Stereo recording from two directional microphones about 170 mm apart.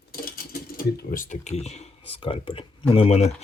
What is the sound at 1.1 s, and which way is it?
Speech, 50° left (ahead or behind).